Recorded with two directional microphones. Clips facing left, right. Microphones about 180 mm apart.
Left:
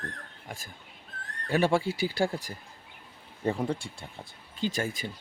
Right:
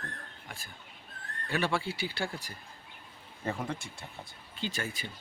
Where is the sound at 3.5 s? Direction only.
35° left (ahead or behind).